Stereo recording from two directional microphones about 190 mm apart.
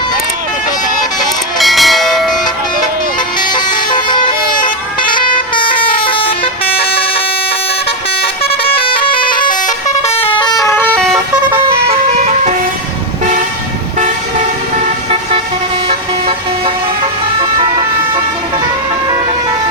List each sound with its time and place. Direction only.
1.5 s bell: centre (ahead or behind)
3.5 s vehicle: 25° left (ahead or behind)
5.5 s vehicle: 25° left (ahead or behind)
8.2 s vehicle horn: 30° left (ahead or behind)
10.2 s vehicle: 30° left (ahead or behind); by 11.2 s 5° left (ahead or behind)
12.1 s vehicle: 40° right (ahead or behind)
15.9 s vehicle: 30° right (ahead or behind)